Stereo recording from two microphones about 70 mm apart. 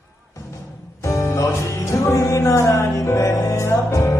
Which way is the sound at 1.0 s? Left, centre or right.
Left.